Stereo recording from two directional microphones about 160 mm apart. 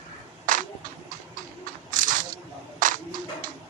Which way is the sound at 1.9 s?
55° right (ahead or behind).